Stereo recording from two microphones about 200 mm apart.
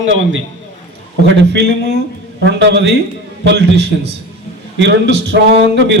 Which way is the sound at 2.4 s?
60° right (ahead or behind).